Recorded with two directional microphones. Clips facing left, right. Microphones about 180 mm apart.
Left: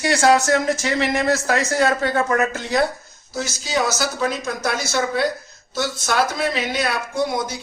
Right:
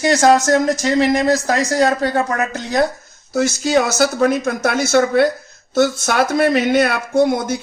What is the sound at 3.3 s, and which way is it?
Speech, 55° right (ahead or behind).